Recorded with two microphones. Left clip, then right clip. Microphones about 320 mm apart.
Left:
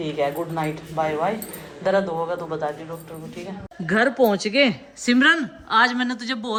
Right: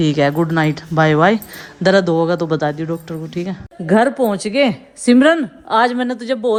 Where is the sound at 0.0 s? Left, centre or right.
Right.